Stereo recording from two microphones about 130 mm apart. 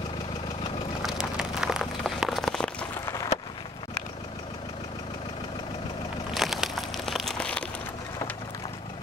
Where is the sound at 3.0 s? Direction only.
25° left (ahead or behind).